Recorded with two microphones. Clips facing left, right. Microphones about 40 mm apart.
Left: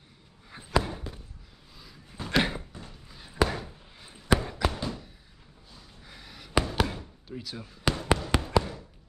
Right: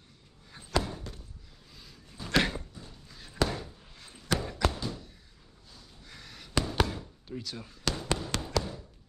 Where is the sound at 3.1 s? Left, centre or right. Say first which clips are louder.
Left 3 dB; centre.